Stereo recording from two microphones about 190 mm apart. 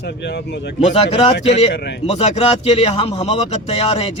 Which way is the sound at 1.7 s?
60° left (ahead or behind).